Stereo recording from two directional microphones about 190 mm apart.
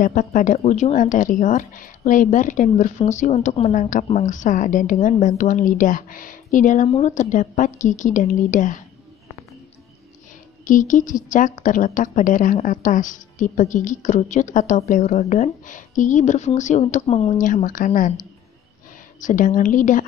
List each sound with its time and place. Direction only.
0.0 s a woman's voice: 45° left (ahead or behind)
10.6 s a woman's voice: 45° left (ahead or behind)